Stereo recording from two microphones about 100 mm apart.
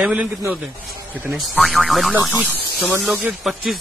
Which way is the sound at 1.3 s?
Centre (ahead or behind).